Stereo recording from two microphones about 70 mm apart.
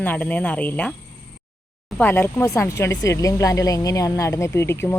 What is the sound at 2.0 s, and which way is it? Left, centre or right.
Speech, left.